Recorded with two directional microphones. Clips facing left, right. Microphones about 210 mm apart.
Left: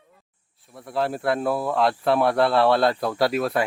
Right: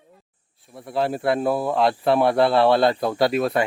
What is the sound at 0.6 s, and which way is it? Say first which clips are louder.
Speech: right 2 dB; centre (ahead or behind).